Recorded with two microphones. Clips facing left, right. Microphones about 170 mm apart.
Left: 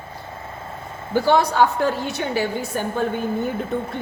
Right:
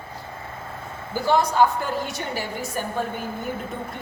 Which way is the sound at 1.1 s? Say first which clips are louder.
Left 3 dB; 65° left (ahead or behind).